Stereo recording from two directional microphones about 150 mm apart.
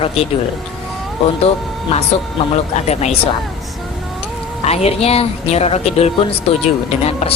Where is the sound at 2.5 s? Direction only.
45° left (ahead or behind).